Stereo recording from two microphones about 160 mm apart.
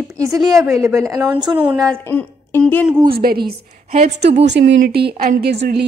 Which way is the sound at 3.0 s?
70° right (ahead or behind).